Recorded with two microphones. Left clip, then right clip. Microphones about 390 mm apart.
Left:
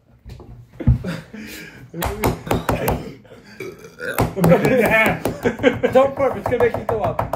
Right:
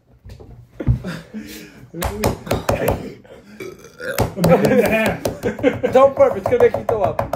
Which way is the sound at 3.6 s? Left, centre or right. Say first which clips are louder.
Left 1 dB; centre.